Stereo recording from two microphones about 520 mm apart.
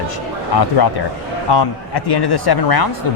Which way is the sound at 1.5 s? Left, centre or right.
Left.